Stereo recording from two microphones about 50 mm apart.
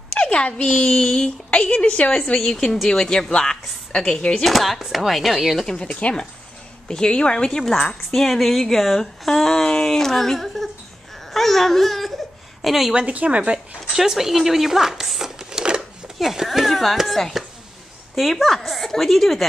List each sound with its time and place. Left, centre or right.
0.1 s a woman's voice: left
4.5 s a woman's voice: centre
5.7 s a woman's voice: centre
12.9 s a woman's voice: right
13.9 s a woman's voice: centre